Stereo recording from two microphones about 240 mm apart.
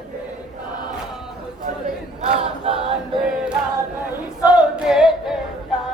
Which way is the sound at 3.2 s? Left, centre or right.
Centre.